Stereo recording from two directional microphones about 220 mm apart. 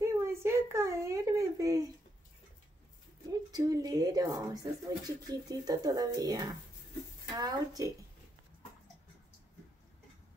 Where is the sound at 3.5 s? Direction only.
15° right (ahead or behind).